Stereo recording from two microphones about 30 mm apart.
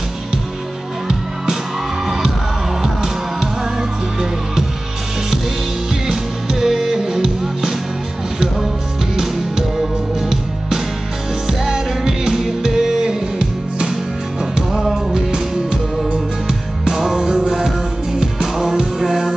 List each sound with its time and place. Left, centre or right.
1.0 s music: centre
6.5 s music: centre
9.1 s music: centre
15.0 s music: right
16.9 s music: centre